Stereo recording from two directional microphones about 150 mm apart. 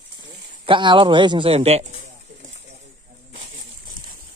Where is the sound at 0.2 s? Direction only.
30° right (ahead or behind).